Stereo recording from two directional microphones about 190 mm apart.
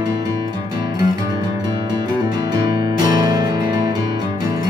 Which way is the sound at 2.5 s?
25° right (ahead or behind).